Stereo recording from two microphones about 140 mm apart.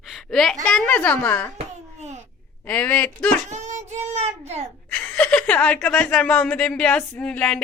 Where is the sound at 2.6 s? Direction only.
15° left (ahead or behind).